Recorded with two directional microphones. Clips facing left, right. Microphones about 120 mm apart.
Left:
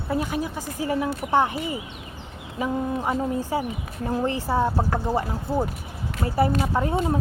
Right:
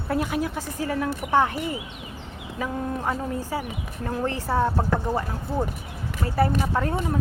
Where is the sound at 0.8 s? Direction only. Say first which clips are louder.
Left 2 dB; 15° left (ahead or behind).